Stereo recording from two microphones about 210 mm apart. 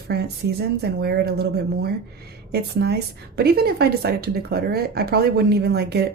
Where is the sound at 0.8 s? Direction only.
50° right (ahead or behind).